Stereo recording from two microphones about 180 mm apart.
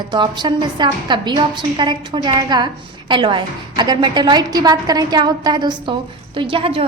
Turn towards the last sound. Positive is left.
turn(degrees=-30)  # may be behind; listen again after turning